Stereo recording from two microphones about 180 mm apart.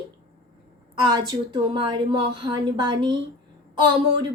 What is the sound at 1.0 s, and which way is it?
A woman's voice, 20° right (ahead or behind).